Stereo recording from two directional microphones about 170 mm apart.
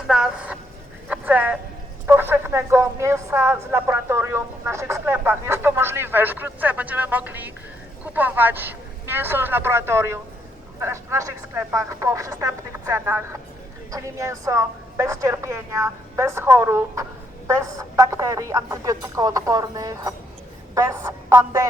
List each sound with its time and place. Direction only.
0.1 s speech: 5° right (ahead or behind)